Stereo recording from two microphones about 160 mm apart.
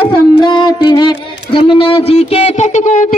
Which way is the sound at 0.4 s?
30° left (ahead or behind).